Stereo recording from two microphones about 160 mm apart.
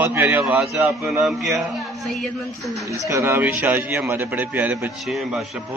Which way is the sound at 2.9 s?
20° right (ahead or behind).